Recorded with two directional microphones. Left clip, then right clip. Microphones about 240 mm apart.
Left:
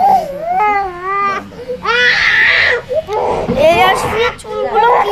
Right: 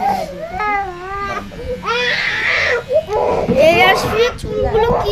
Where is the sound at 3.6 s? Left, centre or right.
Centre.